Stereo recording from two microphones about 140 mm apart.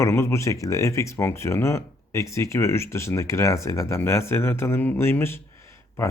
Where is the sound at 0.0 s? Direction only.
20° left (ahead or behind).